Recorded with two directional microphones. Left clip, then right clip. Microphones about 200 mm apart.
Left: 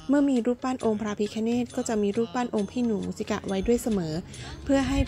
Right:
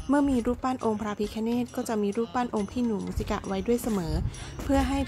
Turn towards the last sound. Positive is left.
turn(degrees=20)  # may be behind; listen again after turning